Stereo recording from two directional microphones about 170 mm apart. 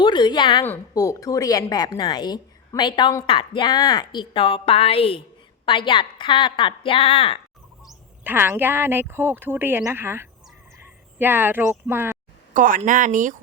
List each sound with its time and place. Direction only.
0.0 s a woman's voice: 25° left (ahead or behind)
0.6 s a woman's voice: 15° left (ahead or behind)
7.9 s speech: 10° right (ahead or behind)
12.5 s speech: 50° right (ahead or behind)